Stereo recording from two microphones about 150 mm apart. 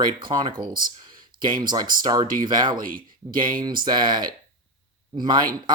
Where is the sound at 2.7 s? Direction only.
70° right (ahead or behind).